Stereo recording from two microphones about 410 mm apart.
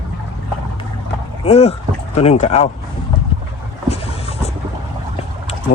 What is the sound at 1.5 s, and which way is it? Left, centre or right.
Speech, centre.